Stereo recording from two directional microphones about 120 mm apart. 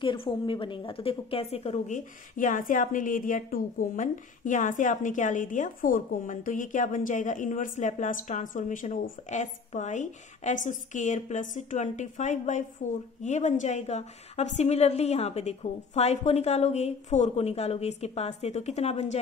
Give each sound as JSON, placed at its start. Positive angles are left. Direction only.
{"t": 0.0, "sound": "a woman's voice", "side_deg": 45}